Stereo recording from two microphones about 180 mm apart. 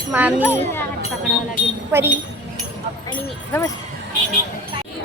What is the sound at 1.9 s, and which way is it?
Speech, 15° right (ahead or behind).